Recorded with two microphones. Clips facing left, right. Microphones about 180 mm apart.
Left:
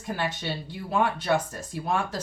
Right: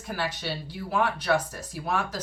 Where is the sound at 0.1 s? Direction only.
20° left (ahead or behind).